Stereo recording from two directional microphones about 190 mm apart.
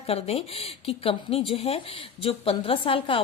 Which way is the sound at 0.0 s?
30° left (ahead or behind).